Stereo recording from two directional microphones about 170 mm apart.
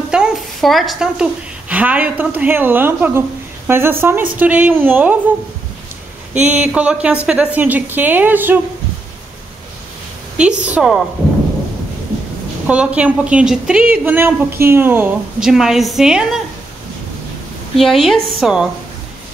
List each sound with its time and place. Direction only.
0.1 s a woman's voice: 5° right (ahead or behind)
6.4 s a woman's voice: 10° right (ahead or behind)
10.3 s a woman's voice: 5° right (ahead or behind)
12.6 s a woman's voice: 5° right (ahead or behind)
17.7 s a woman's voice: centre (ahead or behind)